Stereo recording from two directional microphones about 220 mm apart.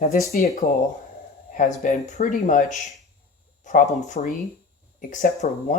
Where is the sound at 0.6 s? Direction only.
45° left (ahead or behind).